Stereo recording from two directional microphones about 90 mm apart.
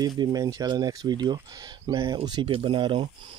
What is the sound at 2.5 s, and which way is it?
Speech, 70° right (ahead or behind).